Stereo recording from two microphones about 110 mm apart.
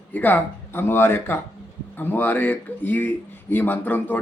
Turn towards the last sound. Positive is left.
turn(degrees=15)  # may be behind; listen again after turning